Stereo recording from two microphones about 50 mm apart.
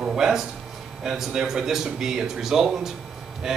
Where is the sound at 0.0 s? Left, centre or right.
Centre.